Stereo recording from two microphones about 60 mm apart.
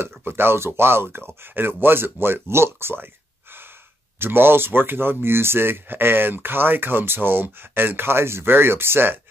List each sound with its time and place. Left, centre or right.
0.0 s speech: right
4.2 s speech: right